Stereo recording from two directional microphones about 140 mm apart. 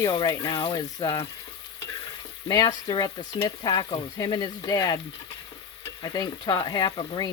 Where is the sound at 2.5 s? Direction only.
30° left (ahead or behind).